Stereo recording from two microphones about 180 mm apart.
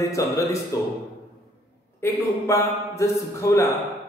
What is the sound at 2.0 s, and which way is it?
A man's voice, 15° left (ahead or behind).